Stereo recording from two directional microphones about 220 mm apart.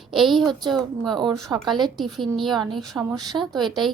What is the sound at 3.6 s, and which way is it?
Speech, centre (ahead or behind).